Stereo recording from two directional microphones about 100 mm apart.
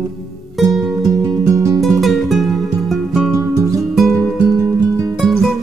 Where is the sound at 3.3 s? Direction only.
35° right (ahead or behind).